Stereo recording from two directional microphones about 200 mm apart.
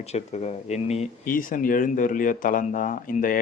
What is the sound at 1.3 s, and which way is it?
Speech, 45° left (ahead or behind).